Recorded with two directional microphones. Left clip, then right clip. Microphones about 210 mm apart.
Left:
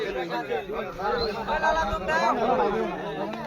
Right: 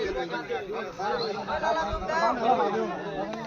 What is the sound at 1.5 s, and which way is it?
Chatter, 40° left (ahead or behind).